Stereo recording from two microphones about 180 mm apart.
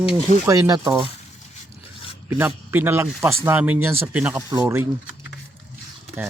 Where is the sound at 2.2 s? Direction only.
10° right (ahead or behind).